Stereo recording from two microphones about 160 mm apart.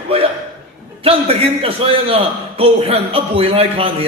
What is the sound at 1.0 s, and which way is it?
A man's voice, 35° right (ahead or behind).